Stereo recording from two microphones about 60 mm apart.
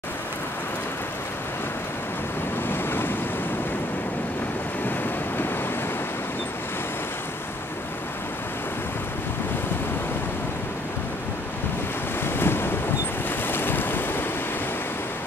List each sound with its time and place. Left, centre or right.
2.7 s waves: left
12.4 s ocean: left
13.5 s boat: left